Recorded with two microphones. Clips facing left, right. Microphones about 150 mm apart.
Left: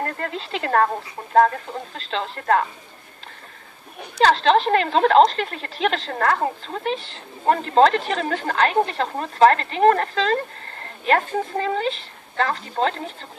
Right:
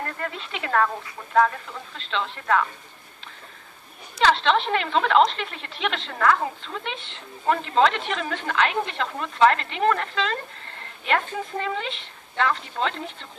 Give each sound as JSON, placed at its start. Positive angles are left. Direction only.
{"t": 0.0, "sound": "a woman's voice", "side_deg": 40}
{"t": 4.2, "sound": "a woman's voice", "side_deg": 40}